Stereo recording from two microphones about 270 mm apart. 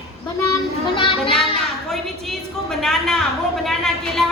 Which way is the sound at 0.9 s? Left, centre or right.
Centre.